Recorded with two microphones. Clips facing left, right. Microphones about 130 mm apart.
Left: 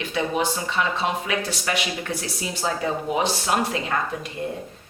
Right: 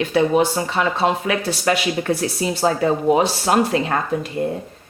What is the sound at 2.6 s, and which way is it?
Speech, 50° right (ahead or behind).